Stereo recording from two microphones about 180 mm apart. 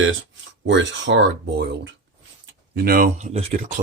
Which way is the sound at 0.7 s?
85° right.